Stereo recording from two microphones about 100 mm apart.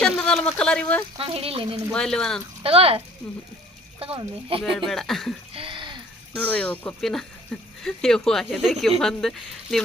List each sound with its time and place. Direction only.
0.0 s speech: 5° left (ahead or behind)
1.2 s speech: 75° right (ahead or behind)
1.9 s speech: 5° left (ahead or behind)
2.6 s speech: 75° right (ahead or behind)
3.2 s speech: 10° left (ahead or behind)
4.0 s speech: 65° right (ahead or behind)
4.9 s speech: 5° left (ahead or behind)
5.5 s a sound: 60° right (ahead or behind)
6.3 s speech: 15° left (ahead or behind)